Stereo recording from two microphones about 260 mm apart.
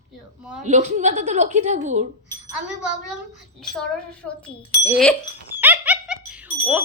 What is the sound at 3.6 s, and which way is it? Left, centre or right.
Speech, centre.